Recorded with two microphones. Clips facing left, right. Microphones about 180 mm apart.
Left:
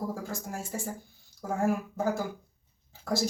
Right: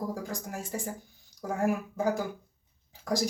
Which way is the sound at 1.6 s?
15° right (ahead or behind).